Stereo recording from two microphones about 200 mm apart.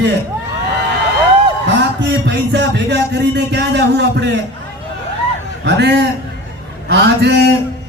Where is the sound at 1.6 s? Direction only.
60° right (ahead or behind).